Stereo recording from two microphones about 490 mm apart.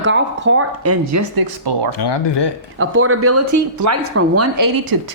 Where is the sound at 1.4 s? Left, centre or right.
Right.